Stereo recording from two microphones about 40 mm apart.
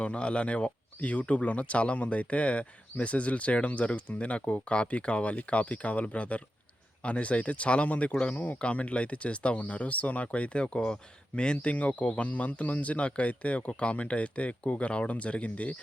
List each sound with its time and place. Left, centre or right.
0.0 s speech: left
11.5 s speech: left